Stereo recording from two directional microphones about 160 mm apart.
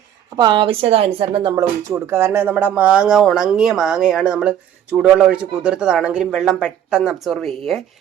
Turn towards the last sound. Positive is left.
turn(degrees=0)  # may be behind; listen again after turning